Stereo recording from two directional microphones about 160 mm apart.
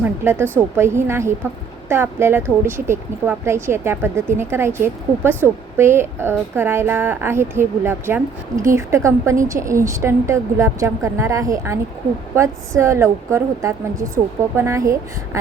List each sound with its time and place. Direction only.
0.0 s a woman's voice: 15° right (ahead or behind)